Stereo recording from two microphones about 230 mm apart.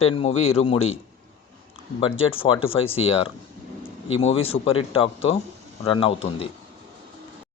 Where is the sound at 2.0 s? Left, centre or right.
Left.